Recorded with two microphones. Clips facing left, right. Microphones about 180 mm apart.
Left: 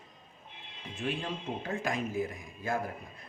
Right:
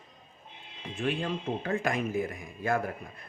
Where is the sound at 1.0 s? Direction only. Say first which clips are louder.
Right 4 dB; 65° right (ahead or behind).